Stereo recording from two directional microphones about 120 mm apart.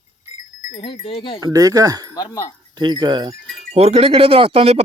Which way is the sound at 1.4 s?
30° right (ahead or behind).